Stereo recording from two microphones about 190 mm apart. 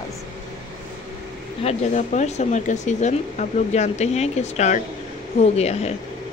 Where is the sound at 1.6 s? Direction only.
40° left (ahead or behind).